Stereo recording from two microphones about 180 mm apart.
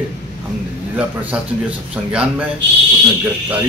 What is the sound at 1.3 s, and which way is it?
Speech, 5° right (ahead or behind).